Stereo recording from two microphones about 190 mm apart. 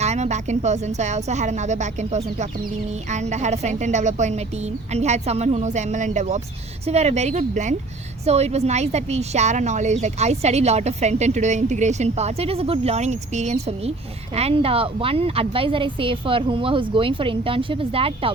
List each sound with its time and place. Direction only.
0.0 s a woman's voice: 35° right (ahead or behind)